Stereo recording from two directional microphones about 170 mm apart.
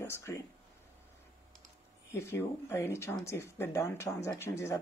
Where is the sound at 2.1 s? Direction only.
15° left (ahead or behind).